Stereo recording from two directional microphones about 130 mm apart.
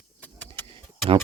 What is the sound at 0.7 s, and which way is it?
Tick, 40° right (ahead or behind).